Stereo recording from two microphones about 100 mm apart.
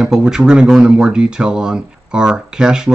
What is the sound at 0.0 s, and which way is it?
Speech, 5° right (ahead or behind).